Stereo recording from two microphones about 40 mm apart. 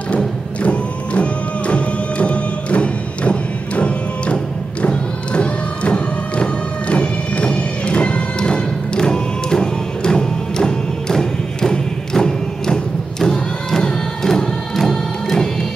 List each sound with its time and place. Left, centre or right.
0.6 s music: left; by 15.5 s centre